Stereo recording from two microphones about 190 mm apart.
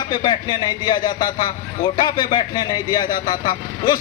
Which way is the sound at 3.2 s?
45° left (ahead or behind).